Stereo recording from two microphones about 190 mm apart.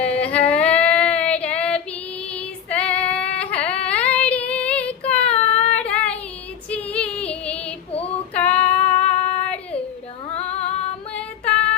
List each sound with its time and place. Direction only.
0.0 s child singing: 5° left (ahead or behind)
2.3 s female singing: 5° left (ahead or behind)
3.3 s a sound: 5° left (ahead or behind)
3.8 s child singing: 5° left (ahead or behind)
6.7 s female singing: 5° left (ahead or behind)
8.5 s female singing: 35° left (ahead or behind)
11.1 s female singing: 5° left (ahead or behind)